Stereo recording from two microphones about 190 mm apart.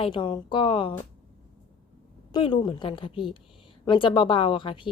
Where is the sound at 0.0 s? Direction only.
25° left (ahead or behind).